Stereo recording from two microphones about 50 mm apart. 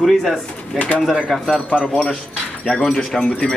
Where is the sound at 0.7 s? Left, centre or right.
Left.